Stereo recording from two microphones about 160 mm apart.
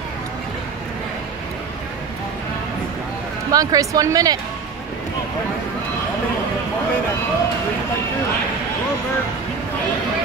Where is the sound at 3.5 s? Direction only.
20° right (ahead or behind).